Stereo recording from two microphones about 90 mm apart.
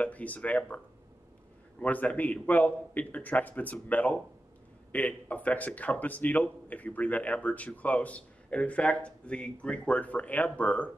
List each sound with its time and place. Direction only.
0.0 s speech: 15° left (ahead or behind)
1.8 s speech: 15° left (ahead or behind)